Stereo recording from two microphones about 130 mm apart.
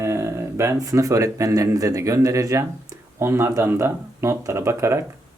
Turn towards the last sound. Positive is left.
turn(degrees=-20)  # may be behind; listen again after turning